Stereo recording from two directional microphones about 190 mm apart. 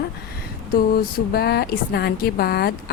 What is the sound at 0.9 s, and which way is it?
Speech, 55° left (ahead or behind).